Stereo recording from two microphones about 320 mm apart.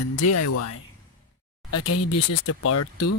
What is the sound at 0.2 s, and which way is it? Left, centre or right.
Speech, left.